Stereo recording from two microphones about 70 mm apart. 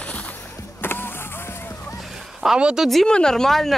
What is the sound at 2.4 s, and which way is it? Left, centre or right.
Speech, centre.